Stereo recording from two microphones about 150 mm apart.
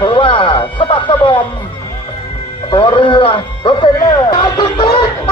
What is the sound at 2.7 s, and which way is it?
Speech, 35° left (ahead or behind).